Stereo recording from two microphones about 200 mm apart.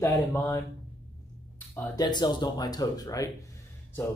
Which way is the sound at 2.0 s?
20° left (ahead or behind).